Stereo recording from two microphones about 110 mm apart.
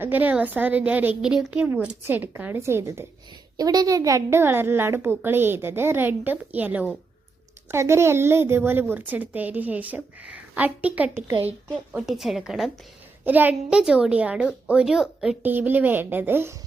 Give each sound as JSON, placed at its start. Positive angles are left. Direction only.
{"t": 0.0, "sound": "a woman's voice", "side_deg": -15}
{"t": 3.6, "sound": "a woman's voice", "side_deg": -35}
{"t": 13.2, "sound": "a woman's voice", "side_deg": -15}
{"t": 15.4, "sound": "a woman's voice", "side_deg": -15}